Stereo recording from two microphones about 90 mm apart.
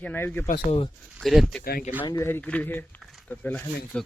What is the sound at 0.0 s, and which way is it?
Speech, 20° left (ahead or behind).